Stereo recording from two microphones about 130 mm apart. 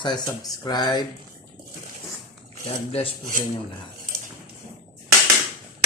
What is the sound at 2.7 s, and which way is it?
Speech, 50° left (ahead or behind).